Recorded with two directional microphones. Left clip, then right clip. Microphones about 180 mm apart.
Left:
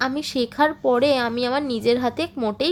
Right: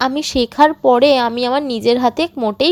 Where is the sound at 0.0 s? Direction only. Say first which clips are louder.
Right 7 dB; 35° right (ahead or behind).